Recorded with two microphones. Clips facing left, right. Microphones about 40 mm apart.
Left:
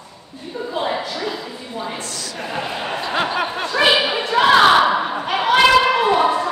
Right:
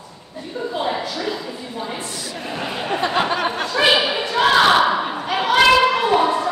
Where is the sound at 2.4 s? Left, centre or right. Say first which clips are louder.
Left 3 dB; centre.